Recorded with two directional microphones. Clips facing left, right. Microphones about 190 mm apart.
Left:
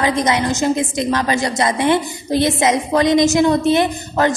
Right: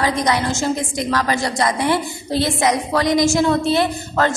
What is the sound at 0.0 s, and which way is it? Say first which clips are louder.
A woman's voice: left 2 dB; 20° left (ahead or behind).